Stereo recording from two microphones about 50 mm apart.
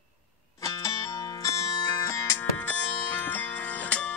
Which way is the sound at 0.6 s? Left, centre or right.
Left.